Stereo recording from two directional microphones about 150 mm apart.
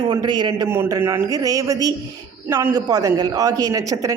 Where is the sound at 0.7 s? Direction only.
15° right (ahead or behind).